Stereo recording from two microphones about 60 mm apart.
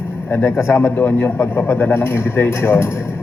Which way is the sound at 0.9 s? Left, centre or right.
Left.